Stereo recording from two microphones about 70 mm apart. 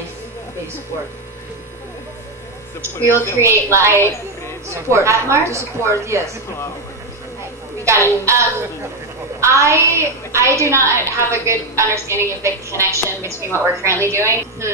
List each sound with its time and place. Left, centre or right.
3.0 s a woman's voice: left
3.3 s a woman's voice: right
7.8 s a woman's voice: right